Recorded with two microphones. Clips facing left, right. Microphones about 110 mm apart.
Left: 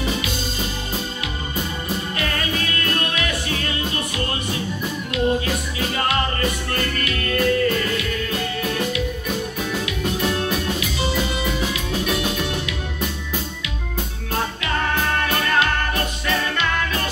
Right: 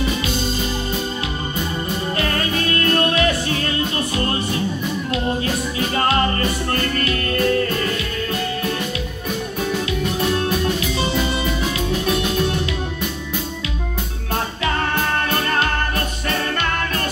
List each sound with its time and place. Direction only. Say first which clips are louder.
3.0 s music: right 7 dB; 35° right (ahead or behind)
6.7 s music: right 3 dB; 35° right (ahead or behind)
15.2 s music: even; 35° right (ahead or behind)